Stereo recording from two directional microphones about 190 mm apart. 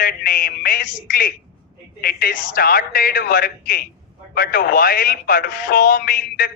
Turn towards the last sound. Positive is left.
turn(degrees=50)  # may be behind; listen again after turning